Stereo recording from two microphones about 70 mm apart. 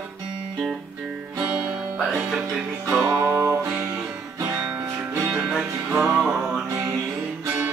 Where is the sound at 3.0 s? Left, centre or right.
Right.